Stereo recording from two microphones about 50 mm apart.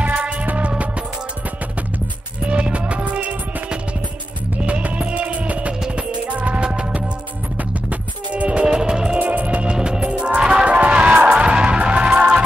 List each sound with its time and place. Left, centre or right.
0.0 s music: right
2.4 s music: right
9.2 s music: right